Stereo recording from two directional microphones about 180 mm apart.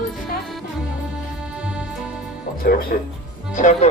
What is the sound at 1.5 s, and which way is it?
Music, 5° right (ahead or behind).